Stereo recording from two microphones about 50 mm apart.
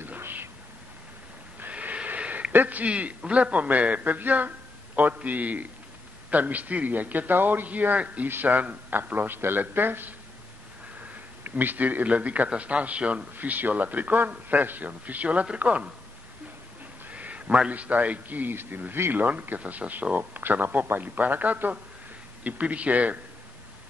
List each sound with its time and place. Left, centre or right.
0.2 s whispering: right
1.7 s a sound: right
2.9 s a man's voice: right
11.4 s a man's voice: right
17.1 s a sound: right
17.6 s a man's voice: right